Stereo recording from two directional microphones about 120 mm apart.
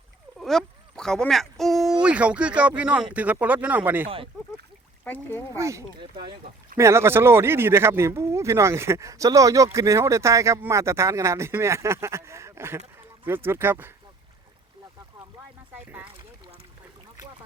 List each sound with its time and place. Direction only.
0.3 s speech: centre (ahead or behind); by 4.0 s 15° right (ahead or behind)
5.0 s speech: 15° left (ahead or behind)
5.5 s speech: 25° right (ahead or behind)
6.0 s speech: 40° right (ahead or behind)
6.7 s speech: 20° right (ahead or behind)
15.7 s speech: 15° right (ahead or behind)